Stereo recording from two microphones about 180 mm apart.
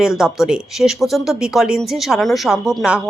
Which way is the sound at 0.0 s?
Centre (ahead or behind).